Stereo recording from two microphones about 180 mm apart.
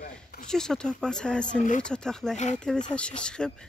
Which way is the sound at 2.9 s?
5° left (ahead or behind).